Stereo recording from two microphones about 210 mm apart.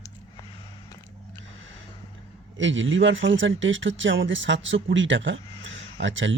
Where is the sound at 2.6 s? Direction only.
65° right (ahead or behind).